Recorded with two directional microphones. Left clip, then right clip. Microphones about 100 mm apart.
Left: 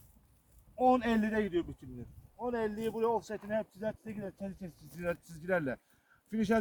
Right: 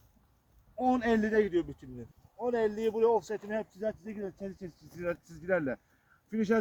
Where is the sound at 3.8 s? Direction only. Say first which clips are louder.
Right 3 dB; 70° left (ahead or behind).